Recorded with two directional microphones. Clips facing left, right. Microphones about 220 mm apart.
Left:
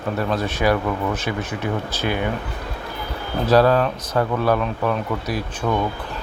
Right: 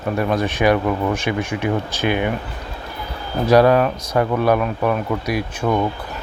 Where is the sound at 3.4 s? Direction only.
15° right (ahead or behind).